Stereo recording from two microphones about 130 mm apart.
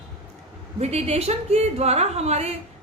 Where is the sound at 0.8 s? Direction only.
55° right (ahead or behind).